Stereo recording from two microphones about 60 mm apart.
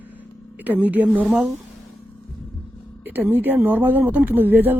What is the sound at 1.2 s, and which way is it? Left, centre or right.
Speech, centre.